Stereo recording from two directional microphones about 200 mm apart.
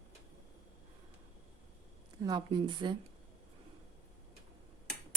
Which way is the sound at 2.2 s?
20° right (ahead or behind).